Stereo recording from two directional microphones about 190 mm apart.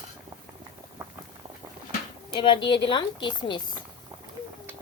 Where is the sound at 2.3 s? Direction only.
25° left (ahead or behind).